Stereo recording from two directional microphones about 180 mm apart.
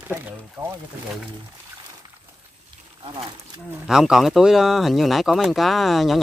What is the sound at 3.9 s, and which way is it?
Speech, centre (ahead or behind).